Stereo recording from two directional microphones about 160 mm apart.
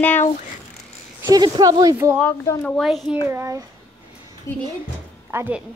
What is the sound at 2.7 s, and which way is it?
Speech, centre (ahead or behind).